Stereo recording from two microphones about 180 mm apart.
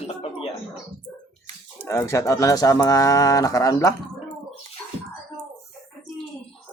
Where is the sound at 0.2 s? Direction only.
30° left (ahead or behind).